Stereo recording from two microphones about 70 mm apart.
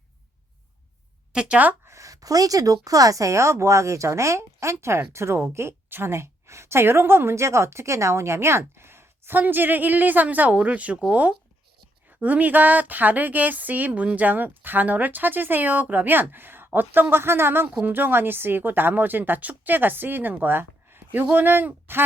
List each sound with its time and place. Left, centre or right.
1.3 s speech: centre
1.9 s a sound: right
2.8 s speech: right